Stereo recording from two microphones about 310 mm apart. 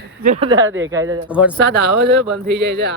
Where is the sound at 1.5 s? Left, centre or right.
Right.